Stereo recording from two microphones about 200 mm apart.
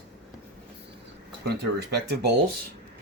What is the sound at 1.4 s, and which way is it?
Speech, 55° right (ahead or behind).